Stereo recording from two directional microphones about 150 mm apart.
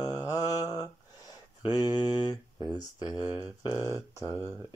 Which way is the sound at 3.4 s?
20° left (ahead or behind).